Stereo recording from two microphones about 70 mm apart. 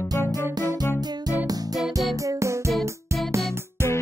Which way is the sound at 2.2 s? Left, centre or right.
Right.